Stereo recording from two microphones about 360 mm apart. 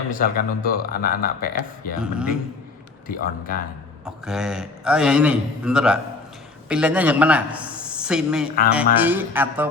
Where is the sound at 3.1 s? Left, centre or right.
Left.